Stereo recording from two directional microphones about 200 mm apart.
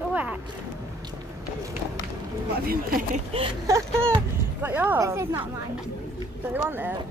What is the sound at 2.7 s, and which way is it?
Speech, 45° right (ahead or behind).